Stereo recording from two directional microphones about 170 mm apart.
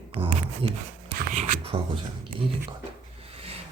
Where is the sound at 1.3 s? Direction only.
50° right (ahead or behind).